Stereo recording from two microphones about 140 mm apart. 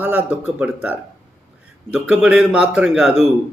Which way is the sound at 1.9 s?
5° right (ahead or behind).